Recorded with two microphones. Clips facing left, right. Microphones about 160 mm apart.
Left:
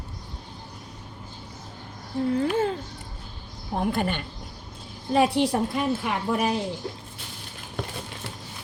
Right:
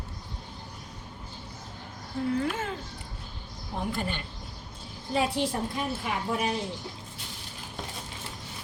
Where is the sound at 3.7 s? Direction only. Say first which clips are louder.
Left 6 dB; 60° left (ahead or behind).